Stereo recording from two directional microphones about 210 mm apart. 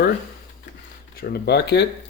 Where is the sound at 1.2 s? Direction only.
45° left (ahead or behind).